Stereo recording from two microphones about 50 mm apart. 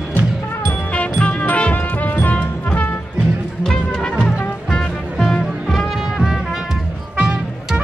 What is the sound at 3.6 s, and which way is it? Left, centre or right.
Music, centre.